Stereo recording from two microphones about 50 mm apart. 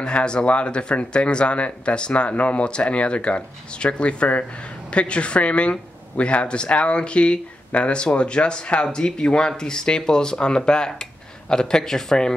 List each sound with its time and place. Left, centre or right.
0.0 s speech: centre